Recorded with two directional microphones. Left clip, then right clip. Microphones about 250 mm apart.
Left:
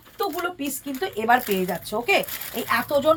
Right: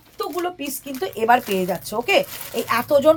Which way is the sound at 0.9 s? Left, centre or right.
Right.